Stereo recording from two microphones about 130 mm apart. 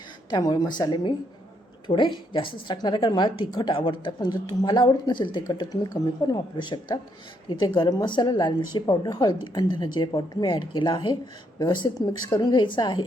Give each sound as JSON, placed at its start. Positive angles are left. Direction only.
{"t": 0.3, "sound": "speech", "side_deg": 30}